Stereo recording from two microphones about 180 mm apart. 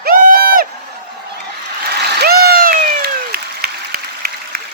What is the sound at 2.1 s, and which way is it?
Applause, 60° right (ahead or behind).